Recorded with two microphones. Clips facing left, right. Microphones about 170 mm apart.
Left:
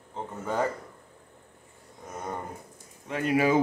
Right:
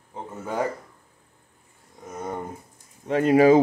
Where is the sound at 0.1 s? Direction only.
10° right (ahead or behind).